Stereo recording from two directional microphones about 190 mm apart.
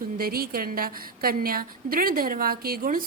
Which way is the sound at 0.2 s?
50° right (ahead or behind).